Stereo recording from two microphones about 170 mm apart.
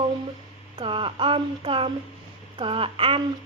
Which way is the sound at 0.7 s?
30° right (ahead or behind).